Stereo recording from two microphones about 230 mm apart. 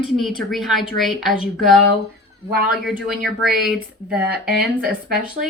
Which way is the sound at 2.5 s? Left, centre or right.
Right.